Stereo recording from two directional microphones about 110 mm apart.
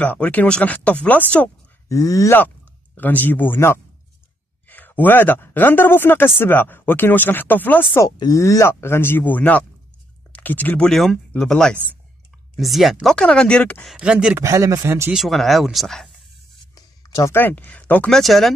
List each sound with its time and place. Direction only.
0.0 s speech: 15° left (ahead or behind)
1.9 s speech: 30° left (ahead or behind)
3.0 s speech: 15° left (ahead or behind)
8.2 s speech: 30° left (ahead or behind)
10.9 s speech: 5° left (ahead or behind)
13.8 s speech: 10° right (ahead or behind)
14.3 s speech: 25° right (ahead or behind)
15.1 s speech: centre (ahead or behind)
16.7 s a sound: 35° left (ahead or behind)
17.3 s speech: 20° left (ahead or behind)
18.1 s speech: centre (ahead or behind)